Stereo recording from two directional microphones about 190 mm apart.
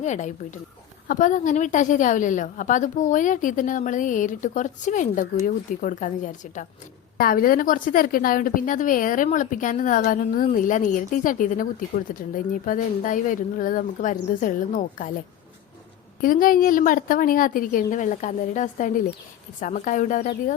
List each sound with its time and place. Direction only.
0.0 s a woman's voice: 40° left (ahead or behind)
16.2 s a woman's voice: 45° left (ahead or behind)